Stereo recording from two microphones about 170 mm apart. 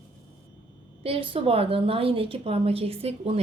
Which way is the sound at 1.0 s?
35° right (ahead or behind).